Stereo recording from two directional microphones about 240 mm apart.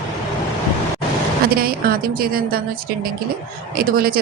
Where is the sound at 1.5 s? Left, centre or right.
Right.